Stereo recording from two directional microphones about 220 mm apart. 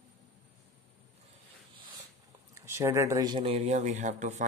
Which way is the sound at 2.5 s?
10° right (ahead or behind).